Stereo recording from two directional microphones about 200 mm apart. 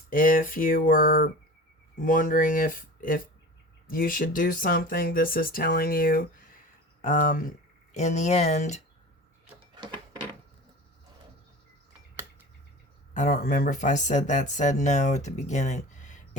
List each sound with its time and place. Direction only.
0.1 s speech: 45° left (ahead or behind)
9.7 s a sound: 20° right (ahead or behind)
13.1 s speech: 45° left (ahead or behind)